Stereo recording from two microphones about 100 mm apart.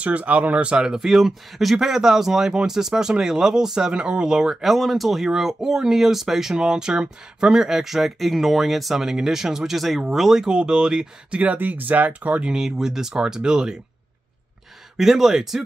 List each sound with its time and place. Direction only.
0.0 s speech: 15° right (ahead or behind)
15.0 s speech: 5° right (ahead or behind)